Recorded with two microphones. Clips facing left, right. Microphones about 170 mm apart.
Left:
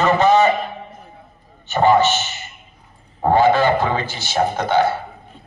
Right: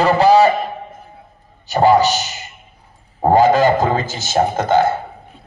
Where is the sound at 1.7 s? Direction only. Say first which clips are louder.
Right 2 dB; 35° right (ahead or behind).